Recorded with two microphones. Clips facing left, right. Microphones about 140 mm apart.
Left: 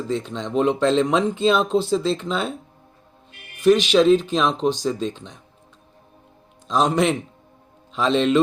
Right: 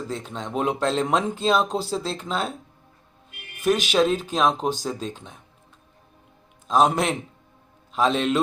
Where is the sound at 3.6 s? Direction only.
45° right (ahead or behind).